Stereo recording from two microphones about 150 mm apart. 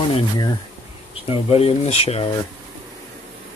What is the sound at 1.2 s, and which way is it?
Speech, 40° left (ahead or behind).